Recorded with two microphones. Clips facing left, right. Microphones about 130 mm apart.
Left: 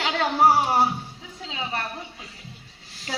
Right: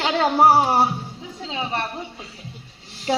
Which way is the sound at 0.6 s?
30° right (ahead or behind).